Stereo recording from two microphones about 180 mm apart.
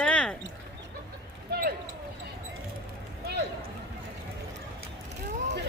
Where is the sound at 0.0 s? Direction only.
5° left (ahead or behind).